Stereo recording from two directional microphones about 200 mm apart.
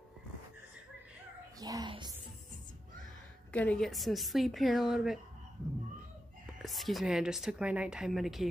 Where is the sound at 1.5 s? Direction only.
20° right (ahead or behind).